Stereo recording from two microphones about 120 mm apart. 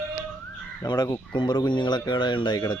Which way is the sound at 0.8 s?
30° left (ahead or behind).